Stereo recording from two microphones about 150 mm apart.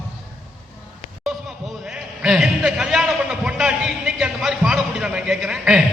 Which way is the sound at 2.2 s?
5° right (ahead or behind).